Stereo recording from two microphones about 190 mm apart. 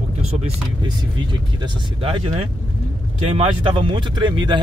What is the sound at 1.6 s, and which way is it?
Speech, 30° right (ahead or behind).